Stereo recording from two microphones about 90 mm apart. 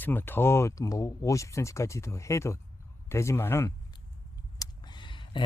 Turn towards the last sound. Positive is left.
turn(degrees=65)  # may be behind; listen again after turning